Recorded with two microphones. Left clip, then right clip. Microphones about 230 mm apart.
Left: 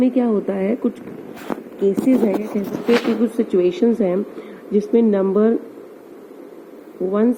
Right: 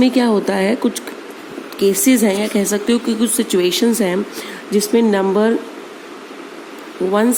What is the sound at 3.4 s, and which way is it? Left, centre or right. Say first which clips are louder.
Speech: right 2 dB; right.